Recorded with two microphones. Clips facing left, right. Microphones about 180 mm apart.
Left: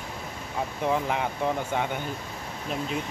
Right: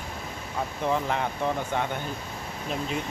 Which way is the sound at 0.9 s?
10° left (ahead or behind).